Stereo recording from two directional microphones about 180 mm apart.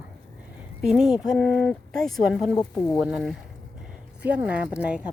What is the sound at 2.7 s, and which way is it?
Speech, 15° left (ahead or behind).